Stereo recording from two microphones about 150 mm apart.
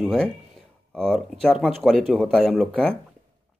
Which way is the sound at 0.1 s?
5° left (ahead or behind).